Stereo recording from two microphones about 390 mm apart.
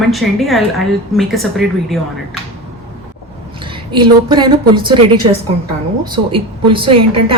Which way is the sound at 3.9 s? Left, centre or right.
Centre.